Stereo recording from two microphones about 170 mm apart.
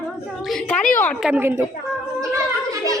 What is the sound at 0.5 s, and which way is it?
Speech, 5° left (ahead or behind).